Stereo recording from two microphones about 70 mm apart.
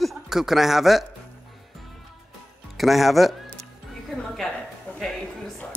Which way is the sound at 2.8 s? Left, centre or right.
Centre.